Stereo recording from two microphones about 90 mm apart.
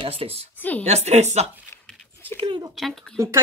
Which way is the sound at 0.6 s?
20° left (ahead or behind).